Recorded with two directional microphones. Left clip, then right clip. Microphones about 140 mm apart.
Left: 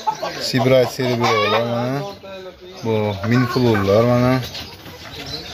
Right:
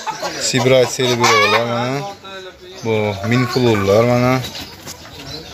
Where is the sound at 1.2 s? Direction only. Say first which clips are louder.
Right 4 dB; 10° right (ahead or behind).